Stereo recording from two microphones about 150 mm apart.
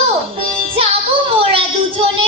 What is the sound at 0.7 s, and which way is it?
Child singing, 40° right (ahead or behind).